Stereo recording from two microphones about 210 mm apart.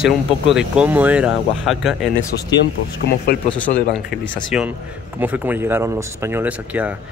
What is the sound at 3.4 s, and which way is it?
Speech, 5° left (ahead or behind).